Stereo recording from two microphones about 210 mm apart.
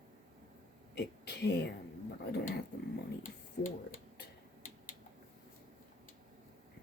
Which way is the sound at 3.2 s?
40° left (ahead or behind).